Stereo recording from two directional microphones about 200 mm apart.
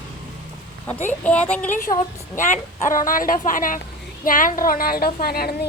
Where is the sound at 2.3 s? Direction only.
40° left (ahead or behind).